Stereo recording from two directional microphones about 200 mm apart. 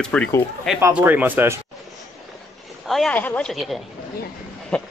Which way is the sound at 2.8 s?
Centre (ahead or behind).